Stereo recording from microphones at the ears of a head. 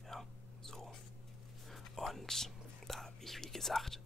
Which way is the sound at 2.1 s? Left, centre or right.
Centre.